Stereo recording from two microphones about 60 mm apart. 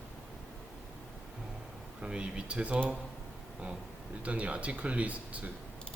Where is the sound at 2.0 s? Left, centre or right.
Centre.